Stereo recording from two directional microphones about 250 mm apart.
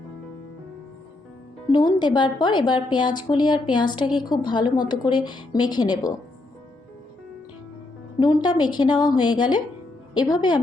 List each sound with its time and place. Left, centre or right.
1.7 s a woman's voice: centre
8.2 s a woman's voice: centre